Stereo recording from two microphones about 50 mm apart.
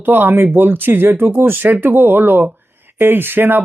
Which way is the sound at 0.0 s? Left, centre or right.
Right.